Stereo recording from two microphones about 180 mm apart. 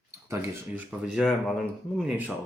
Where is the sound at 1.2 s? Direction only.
5° right (ahead or behind).